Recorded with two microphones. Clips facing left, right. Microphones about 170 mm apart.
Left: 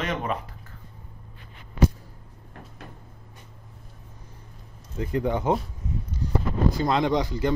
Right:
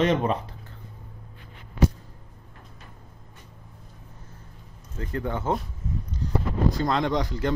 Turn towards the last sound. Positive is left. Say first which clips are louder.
# left 1 dB
turn(degrees=5)  # may be behind; listen again after turning